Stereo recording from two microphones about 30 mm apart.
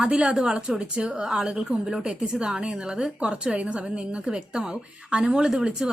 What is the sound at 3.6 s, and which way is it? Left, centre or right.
Speech, right.